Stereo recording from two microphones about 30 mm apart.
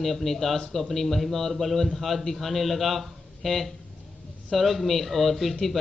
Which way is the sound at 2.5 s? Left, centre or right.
Centre.